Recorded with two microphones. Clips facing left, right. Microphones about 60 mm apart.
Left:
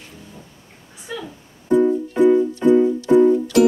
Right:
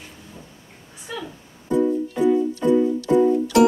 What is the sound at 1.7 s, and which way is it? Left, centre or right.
Music, left.